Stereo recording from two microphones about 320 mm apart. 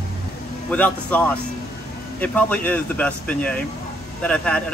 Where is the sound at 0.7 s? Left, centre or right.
Centre.